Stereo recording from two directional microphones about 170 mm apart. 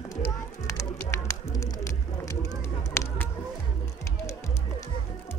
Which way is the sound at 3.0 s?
15° left (ahead or behind).